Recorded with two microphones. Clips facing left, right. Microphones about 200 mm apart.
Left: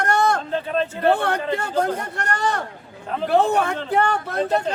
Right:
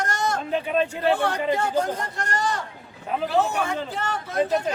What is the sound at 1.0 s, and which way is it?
Speech, 60° left (ahead or behind).